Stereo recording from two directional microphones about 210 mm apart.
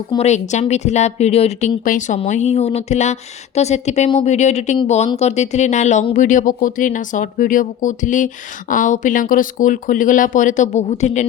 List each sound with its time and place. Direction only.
0.1 s a woman's voice: 30° left (ahead or behind)